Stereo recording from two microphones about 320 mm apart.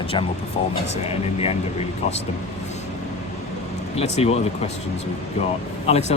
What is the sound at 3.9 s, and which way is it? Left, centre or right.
Speech, centre.